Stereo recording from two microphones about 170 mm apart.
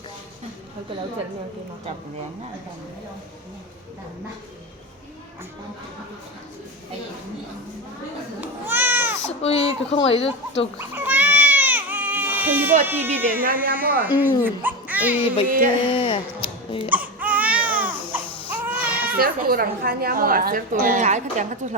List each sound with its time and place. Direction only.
8.4 s a sound: 10° right (ahead or behind)
9.4 s speech: 35° left (ahead or behind)
10.8 s baby cry: 10° right (ahead or behind)
12.8 s speech: 15° right (ahead or behind)
13.4 s a woman's voice: 55° right (ahead or behind)
14.0 s speech: 10° right (ahead or behind)
15.4 s a woman's voice: 55° right (ahead or behind)
15.9 s speech: 30° left (ahead or behind)
16.9 s baby cry: 10° right (ahead or behind)
19.1 s a woman's voice: 60° right (ahead or behind)